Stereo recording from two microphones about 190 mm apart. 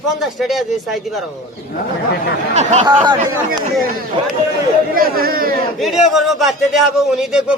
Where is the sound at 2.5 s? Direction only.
35° right (ahead or behind).